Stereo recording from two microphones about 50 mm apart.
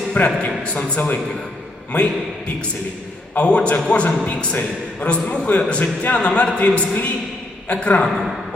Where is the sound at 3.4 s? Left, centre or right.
Left.